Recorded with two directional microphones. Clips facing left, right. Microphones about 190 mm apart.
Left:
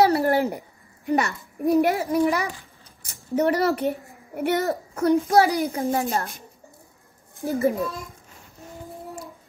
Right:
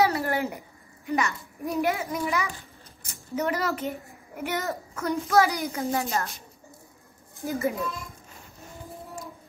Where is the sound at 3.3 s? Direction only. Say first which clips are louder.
Left 7 dB; 35° left (ahead or behind).